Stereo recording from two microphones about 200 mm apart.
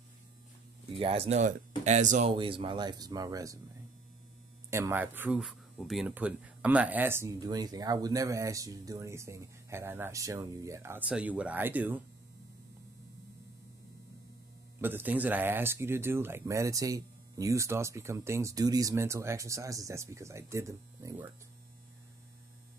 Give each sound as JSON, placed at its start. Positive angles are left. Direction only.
{"t": 0.9, "sound": "speech", "side_deg": -30}
{"t": 2.3, "sound": "speech", "side_deg": -25}
{"t": 4.6, "sound": "speech", "side_deg": -15}
{"t": 14.8, "sound": "speech", "side_deg": -10}